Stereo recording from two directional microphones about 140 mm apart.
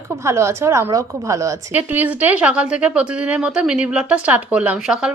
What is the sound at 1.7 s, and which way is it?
Speech, 10° right (ahead or behind).